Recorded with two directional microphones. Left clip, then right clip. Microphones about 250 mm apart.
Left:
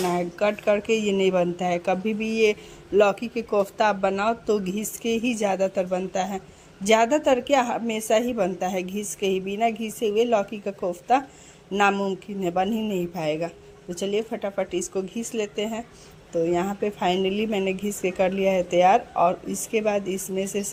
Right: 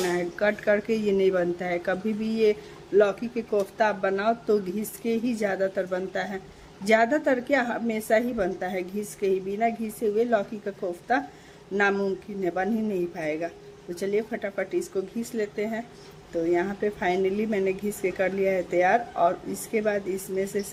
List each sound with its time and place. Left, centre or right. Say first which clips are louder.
0.1 s speech: left 1 dB; centre